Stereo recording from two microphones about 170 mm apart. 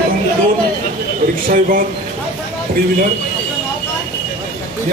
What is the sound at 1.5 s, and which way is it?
Speech, 55° right (ahead or behind).